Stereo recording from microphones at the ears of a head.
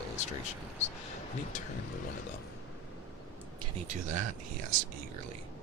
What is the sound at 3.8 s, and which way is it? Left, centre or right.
Speech, right.